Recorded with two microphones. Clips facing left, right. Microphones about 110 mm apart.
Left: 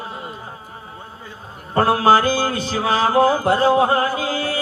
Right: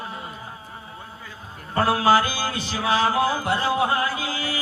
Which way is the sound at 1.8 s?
35° left (ahead or behind).